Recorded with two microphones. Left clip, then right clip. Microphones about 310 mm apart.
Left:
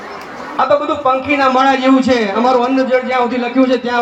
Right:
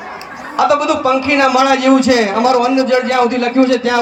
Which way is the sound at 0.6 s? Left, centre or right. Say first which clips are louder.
Right 1 dB; right.